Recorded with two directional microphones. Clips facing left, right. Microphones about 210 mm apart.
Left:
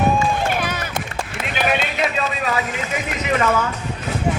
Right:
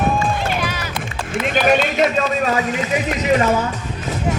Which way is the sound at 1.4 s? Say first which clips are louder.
Right 6 dB; 45° right (ahead or behind).